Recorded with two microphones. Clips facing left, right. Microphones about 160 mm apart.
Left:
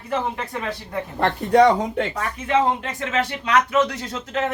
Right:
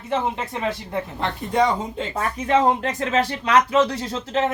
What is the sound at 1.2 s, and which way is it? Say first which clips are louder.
Speech: left 6 dB; 70° left (ahead or behind).